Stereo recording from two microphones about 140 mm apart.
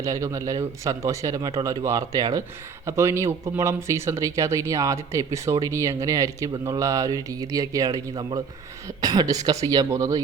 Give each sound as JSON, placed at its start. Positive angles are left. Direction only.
{"t": 0.0, "sound": "speech", "side_deg": -25}